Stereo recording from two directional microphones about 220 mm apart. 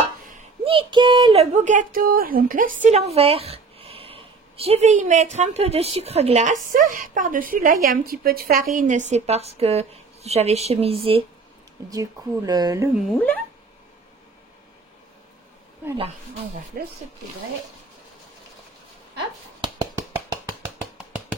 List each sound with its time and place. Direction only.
0.7 s speech: 20° right (ahead or behind)
11.9 s speech: 15° right (ahead or behind)
12.9 s speech: 5° left (ahead or behind)
16.8 s speech: 40° right (ahead or behind)
19.6 s a sound: 15° right (ahead or behind)